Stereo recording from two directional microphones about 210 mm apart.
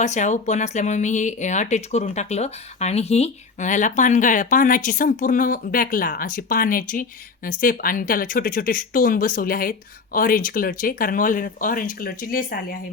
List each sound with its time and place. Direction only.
0.0 s speech: 35° left (ahead or behind)